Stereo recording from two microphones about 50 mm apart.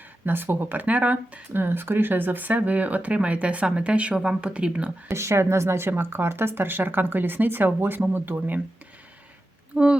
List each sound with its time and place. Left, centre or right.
0.3 s speech: right
0.9 s speech: right
1.5 s speech: right
5.0 s a woman's voice: right
9.7 s speech: centre